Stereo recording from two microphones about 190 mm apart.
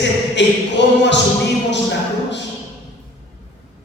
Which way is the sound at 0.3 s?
70° left (ahead or behind).